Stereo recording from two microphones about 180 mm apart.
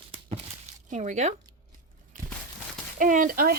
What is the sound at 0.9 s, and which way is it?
Speech, 40° right (ahead or behind).